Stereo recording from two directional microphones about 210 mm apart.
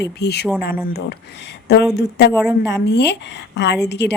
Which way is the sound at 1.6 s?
50° left (ahead or behind).